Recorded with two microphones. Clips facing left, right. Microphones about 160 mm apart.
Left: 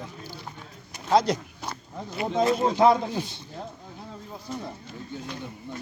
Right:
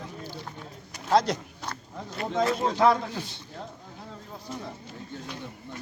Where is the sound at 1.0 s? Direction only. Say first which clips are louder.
Left 1 dB; centre (ahead or behind).